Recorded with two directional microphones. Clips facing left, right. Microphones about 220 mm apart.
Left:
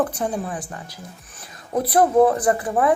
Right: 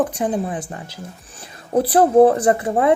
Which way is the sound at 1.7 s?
30° right (ahead or behind).